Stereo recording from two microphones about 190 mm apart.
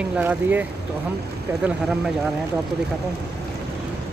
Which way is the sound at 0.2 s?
10° right (ahead or behind).